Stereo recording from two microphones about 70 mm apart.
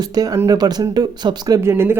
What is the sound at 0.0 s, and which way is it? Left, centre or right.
Speech, right.